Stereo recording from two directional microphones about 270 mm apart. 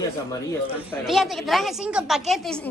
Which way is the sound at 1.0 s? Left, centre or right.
Centre.